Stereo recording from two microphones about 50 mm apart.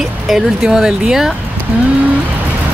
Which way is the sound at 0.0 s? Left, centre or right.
Centre.